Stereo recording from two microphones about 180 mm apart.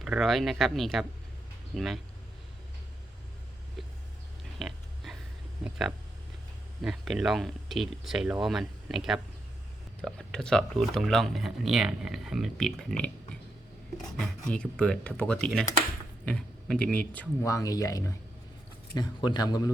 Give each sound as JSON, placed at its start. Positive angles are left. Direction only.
{"t": 0.0, "sound": "speech", "side_deg": 0}
{"t": 4.6, "sound": "a sound", "side_deg": 0}
{"t": 5.6, "sound": "speech", "side_deg": -5}
{"t": 14.2, "sound": "speech", "side_deg": 5}
{"t": 17.4, "sound": "a man's voice", "side_deg": 20}